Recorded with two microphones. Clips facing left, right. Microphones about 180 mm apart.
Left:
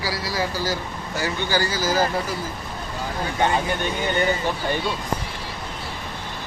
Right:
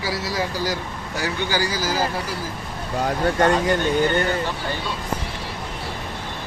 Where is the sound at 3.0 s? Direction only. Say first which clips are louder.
Right 5 dB; 70° right (ahead or behind).